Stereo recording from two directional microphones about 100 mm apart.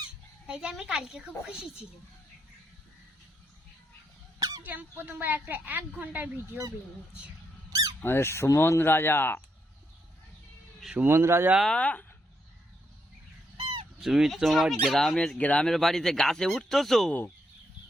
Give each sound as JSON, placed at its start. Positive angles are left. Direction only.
{"t": 0.4, "sound": "speech", "side_deg": -10}
{"t": 4.4, "sound": "a sound", "side_deg": -40}
{"t": 4.6, "sound": "speech", "side_deg": -15}
{"t": 7.7, "sound": "squeak", "side_deg": -35}
{"t": 8.0, "sound": "speech", "side_deg": 25}
{"t": 10.9, "sound": "speech", "side_deg": -25}
{"t": 11.7, "sound": "speech", "side_deg": 15}
{"t": 13.6, "sound": "fowl", "side_deg": -55}
{"t": 14.0, "sound": "speech", "side_deg": -5}